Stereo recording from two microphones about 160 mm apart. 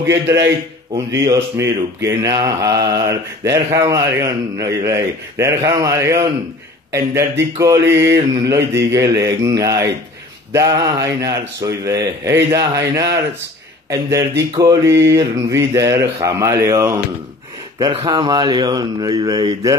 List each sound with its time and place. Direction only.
0.0 s a man's voice: 15° right (ahead or behind)
1.2 s mantra: 20° right (ahead or behind)